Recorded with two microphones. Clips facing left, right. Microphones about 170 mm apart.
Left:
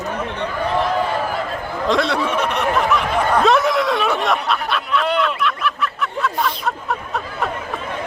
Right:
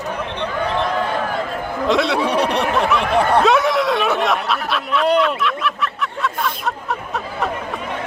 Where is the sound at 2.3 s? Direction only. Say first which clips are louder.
Right 3 dB; 35° right (ahead or behind).